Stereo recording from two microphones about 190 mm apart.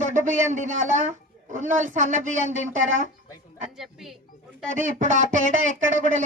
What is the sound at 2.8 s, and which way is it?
Speech, 90° right.